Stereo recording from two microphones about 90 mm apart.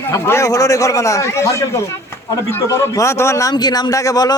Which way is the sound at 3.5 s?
50° left (ahead or behind).